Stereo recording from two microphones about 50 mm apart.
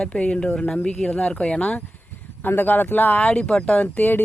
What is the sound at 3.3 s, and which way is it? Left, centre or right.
Speech, centre.